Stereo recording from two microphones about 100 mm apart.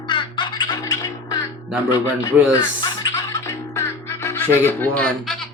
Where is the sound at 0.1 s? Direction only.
50° left (ahead or behind); by 1.5 s 35° left (ahead or behind).